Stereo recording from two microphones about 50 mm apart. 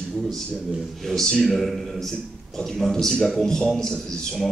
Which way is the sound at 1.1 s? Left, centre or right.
Centre.